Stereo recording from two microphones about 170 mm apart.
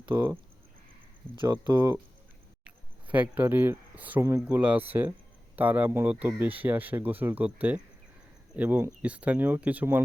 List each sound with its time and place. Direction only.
0.1 s speech: 15° right (ahead or behind)
1.4 s speech: 25° right (ahead or behind)